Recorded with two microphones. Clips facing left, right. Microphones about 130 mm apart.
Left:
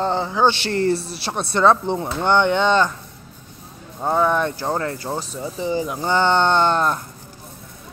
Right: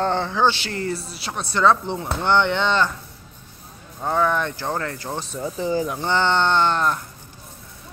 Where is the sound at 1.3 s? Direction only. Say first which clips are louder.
Left 2 dB; 25° left (ahead or behind).